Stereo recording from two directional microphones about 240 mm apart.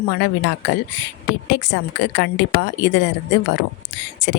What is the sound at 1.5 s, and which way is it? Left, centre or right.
A woman's voice, left.